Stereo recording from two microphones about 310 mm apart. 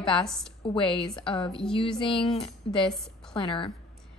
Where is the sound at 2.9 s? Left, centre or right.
Centre.